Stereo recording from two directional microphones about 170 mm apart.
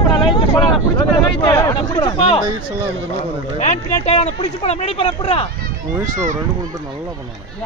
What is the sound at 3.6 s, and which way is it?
Speech, 40° left (ahead or behind).